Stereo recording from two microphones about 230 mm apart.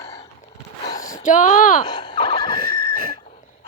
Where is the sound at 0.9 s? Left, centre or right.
Centre.